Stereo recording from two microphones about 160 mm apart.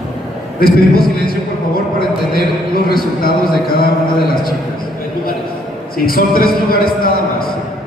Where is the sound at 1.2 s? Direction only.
65° left (ahead or behind).